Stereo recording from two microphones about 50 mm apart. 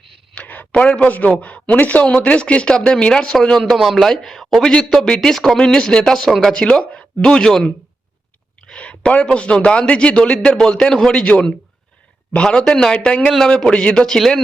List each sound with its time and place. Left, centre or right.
0.3 s a sound: left
0.7 s a man's voice: left
3.6 s speech: centre
5.3 s a man's voice: centre
14.2 s speech: centre